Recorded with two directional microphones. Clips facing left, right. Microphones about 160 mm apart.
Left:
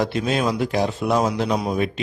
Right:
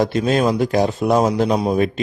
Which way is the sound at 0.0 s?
45° right (ahead or behind).